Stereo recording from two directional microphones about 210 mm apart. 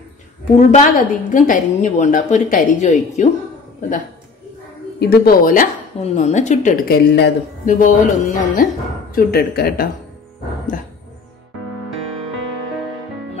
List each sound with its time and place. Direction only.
0.6 s a woman's voice: 35° left (ahead or behind)
5.0 s a woman's voice: 45° left (ahead or behind)